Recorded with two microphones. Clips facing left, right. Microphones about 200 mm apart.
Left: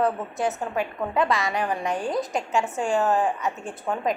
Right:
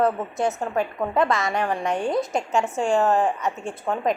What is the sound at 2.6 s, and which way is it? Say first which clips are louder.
Speech: right 2 dB; 20° right (ahead or behind).